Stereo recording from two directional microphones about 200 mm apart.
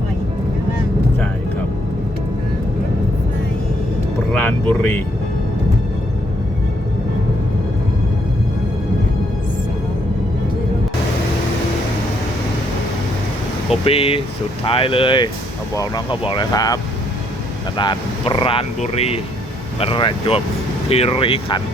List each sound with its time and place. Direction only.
4.4 s speech: 10° left (ahead or behind)
13.8 s speech: 30° left (ahead or behind)